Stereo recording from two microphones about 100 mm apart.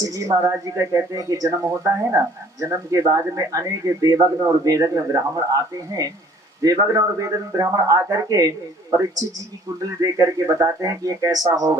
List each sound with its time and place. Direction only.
0.0 s speech: 35° right (ahead or behind)
6.6 s speech: 35° right (ahead or behind)